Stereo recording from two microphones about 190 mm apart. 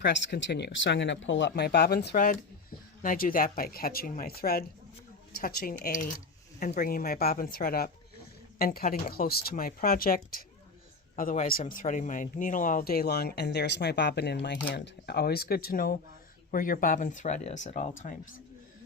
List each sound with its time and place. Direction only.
0.0 s speech: 65° left (ahead or behind); by 18.2 s 40° left (ahead or behind)